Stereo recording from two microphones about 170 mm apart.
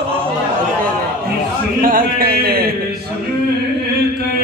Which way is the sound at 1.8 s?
55° right (ahead or behind).